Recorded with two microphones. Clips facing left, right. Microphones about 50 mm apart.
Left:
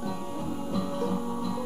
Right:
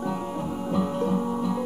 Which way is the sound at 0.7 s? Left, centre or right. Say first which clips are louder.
Right 5 dB; right.